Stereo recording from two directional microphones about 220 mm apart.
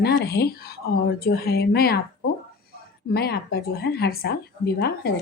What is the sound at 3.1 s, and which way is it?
A woman's voice, 45° left (ahead or behind).